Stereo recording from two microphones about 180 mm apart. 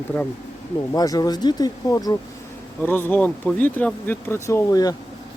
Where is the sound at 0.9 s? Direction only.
20° left (ahead or behind).